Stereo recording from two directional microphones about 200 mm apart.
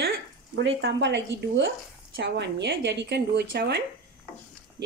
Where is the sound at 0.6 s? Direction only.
65° right (ahead or behind).